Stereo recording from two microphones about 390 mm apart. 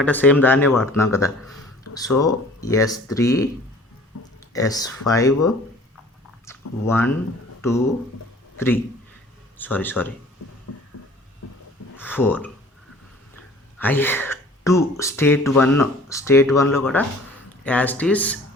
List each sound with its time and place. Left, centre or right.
0.0 s speech: centre
1.9 s a sound: left
2.2 s speech: centre
4.5 s a man's voice: centre
10.7 s a sound: left
11.9 s speech: centre
13.7 s speech: centre